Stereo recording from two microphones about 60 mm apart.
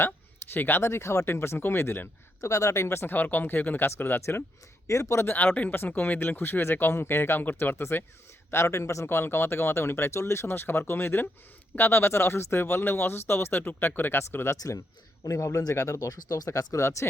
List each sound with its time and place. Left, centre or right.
0.5 s speech: left
2.4 s speech: left
3.2 s speech: left
4.9 s speech: left
5.2 s speech: left
9.0 s speech: left
14.5 s speech: left